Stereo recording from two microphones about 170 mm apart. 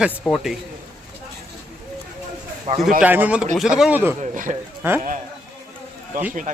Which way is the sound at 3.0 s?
10° right (ahead or behind).